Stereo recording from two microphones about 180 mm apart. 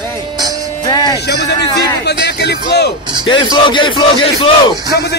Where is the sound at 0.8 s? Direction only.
20° left (ahead or behind).